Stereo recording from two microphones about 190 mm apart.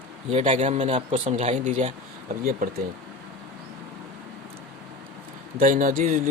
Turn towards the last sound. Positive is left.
turn(degrees=-45)  # may be behind; listen again after turning